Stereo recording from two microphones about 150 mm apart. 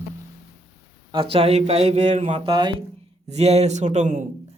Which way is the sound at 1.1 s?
35° right (ahead or behind).